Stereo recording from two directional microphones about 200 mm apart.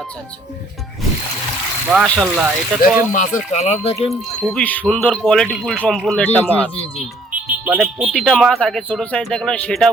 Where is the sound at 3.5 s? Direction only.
35° left (ahead or behind).